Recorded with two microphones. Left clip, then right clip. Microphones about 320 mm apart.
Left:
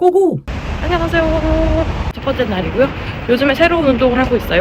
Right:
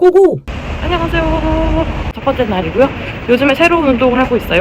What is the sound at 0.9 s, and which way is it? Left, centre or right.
Speech, centre.